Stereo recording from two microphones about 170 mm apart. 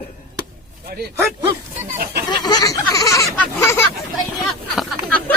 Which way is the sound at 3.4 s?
15° left (ahead or behind).